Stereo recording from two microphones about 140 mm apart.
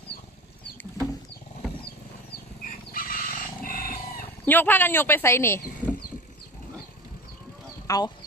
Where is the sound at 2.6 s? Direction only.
90° left.